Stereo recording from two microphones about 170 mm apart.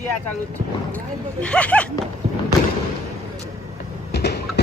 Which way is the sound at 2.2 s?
35° right (ahead or behind).